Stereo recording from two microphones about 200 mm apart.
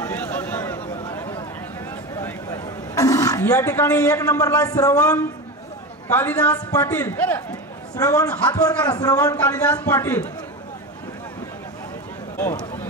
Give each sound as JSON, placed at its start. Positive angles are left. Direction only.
{"t": 0.0, "sound": "a sound", "side_deg": 10}
{"t": 2.1, "sound": "roaring cats", "side_deg": 15}
{"t": 6.0, "sound": "a man's voice", "side_deg": 10}